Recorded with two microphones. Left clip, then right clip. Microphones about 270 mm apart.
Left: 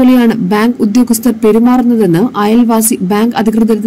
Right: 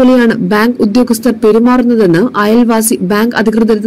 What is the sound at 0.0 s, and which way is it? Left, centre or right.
A woman's voice, centre.